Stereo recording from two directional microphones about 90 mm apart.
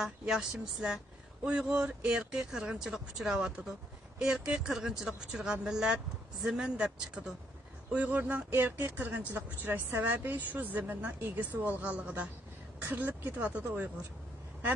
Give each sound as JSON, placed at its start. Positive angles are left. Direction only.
{"t": 0.0, "sound": "speech", "side_deg": -10}